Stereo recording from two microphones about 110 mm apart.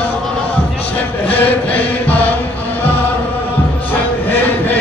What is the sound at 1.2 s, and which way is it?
Chant, 15° left (ahead or behind).